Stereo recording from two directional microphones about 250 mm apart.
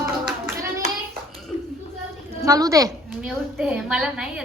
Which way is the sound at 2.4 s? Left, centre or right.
Centre.